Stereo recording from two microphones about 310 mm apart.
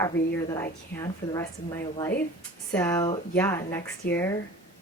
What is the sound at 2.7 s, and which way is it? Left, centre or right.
Speech, centre.